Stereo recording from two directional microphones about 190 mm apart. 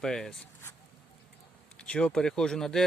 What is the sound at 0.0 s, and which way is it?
Speech, centre (ahead or behind).